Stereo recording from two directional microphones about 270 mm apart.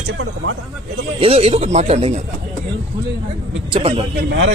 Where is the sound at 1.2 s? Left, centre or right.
Right.